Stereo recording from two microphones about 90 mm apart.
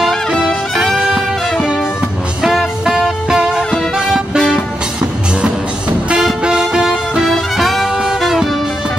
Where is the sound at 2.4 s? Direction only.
5° right (ahead or behind).